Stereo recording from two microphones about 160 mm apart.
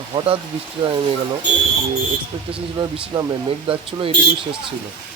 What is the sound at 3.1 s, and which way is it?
Speech, 30° right (ahead or behind).